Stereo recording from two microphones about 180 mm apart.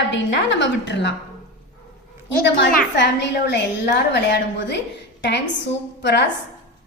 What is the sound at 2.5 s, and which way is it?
A woman's voice, 70° left (ahead or behind).